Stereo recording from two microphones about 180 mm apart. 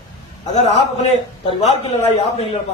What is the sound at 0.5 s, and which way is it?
Speech, 40° left (ahead or behind).